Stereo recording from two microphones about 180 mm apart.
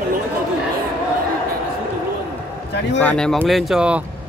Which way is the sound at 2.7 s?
70° left (ahead or behind).